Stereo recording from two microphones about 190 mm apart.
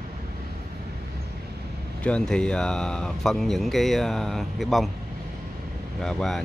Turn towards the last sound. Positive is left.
turn(degrees=0)  # may be behind; listen again after turning